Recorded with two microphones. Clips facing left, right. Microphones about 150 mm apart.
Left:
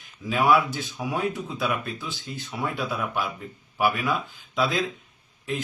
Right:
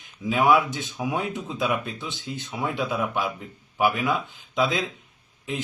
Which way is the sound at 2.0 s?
20° right (ahead or behind).